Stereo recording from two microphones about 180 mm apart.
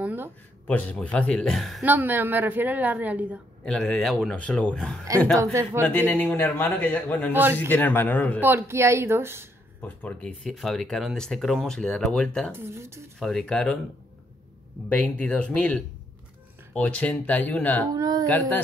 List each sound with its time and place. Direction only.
0.0 s speech: 10° right (ahead or behind)
0.7 s a man's voice: 10° left (ahead or behind); by 3.3 s 10° right (ahead or behind)
3.6 s speech: 5° left (ahead or behind)
5.4 s a man's voice: 15° right (ahead or behind)
5.9 s a man's voice: 10° left (ahead or behind)
8.4 s a man's voice: 10° right (ahead or behind)
9.8 s speech: 5° left (ahead or behind)
12.5 s a man's voice: 15° right (ahead or behind)
13.2 s speech: centre (ahead or behind)
14.9 s a man's voice: 10° left (ahead or behind)
17.9 s speech: 20° right (ahead or behind)